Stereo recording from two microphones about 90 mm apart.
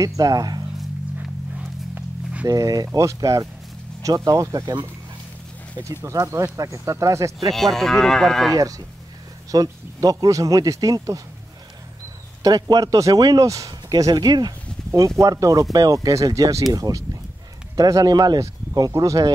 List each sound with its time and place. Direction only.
0.0 s speech: 45° right (ahead or behind)
1.6 s walk: 15° right (ahead or behind)
2.4 s speech: 40° right (ahead or behind)
5.8 s speech: 45° right (ahead or behind)
7.5 s speech: 5° left (ahead or behind)
8.5 s speech: 40° right (ahead or behind)
12.4 s speech: 45° right (ahead or behind)
14.9 s speech: 35° right (ahead or behind)